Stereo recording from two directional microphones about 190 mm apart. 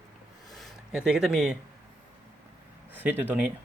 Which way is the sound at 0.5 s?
Centre (ahead or behind).